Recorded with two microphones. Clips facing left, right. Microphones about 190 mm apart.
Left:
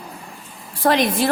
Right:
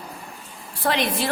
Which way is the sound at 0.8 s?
45° left (ahead or behind).